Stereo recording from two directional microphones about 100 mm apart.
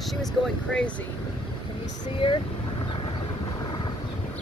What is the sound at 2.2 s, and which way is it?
Speech, 60° left (ahead or behind).